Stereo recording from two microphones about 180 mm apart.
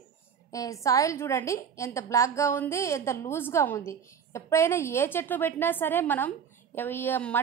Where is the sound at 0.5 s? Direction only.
20° left (ahead or behind).